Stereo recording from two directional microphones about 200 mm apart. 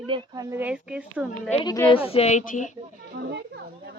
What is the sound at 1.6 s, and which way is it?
Speech, 20° left (ahead or behind).